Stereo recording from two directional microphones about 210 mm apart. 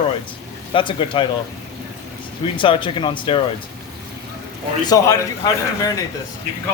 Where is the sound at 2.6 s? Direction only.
25° left (ahead or behind).